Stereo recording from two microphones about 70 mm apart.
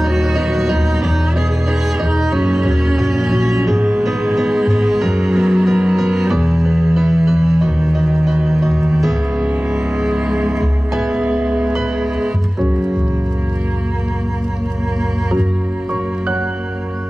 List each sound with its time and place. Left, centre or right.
0.0 s music: centre
2.3 s music: centre